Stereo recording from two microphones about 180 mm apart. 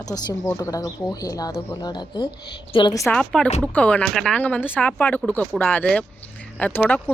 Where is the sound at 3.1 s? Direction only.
5° left (ahead or behind).